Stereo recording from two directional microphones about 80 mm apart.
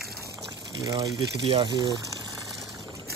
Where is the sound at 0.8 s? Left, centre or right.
Right.